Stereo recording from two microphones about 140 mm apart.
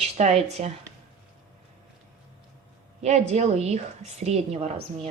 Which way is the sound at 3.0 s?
50° right (ahead or behind).